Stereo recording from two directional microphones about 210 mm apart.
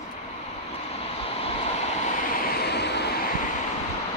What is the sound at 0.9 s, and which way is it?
Vehicle, 25° left (ahead or behind).